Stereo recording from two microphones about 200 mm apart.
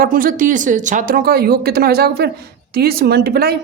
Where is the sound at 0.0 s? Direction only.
45° right (ahead or behind).